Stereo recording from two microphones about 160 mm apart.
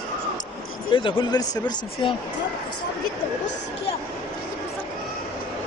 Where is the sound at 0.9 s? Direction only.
30° left (ahead or behind).